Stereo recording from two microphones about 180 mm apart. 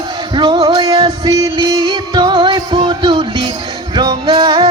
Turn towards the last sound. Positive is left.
turn(degrees=-25)  # may be behind; listen again after turning